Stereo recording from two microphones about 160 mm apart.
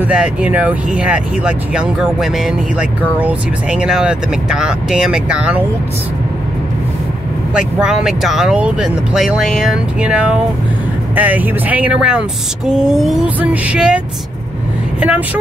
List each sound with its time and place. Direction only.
0.0 s speech: 5° right (ahead or behind)
7.5 s speech: 5° right (ahead or behind)